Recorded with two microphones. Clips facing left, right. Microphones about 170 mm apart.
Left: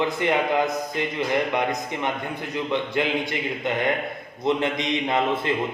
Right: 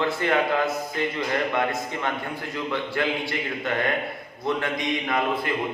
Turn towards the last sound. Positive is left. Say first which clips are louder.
# left 2 dB
turn(degrees=25)  # may be behind; listen again after turning